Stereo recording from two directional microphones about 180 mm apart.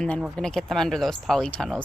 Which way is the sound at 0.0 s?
Centre (ahead or behind).